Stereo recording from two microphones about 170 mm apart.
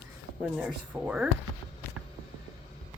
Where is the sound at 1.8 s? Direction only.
15° left (ahead or behind).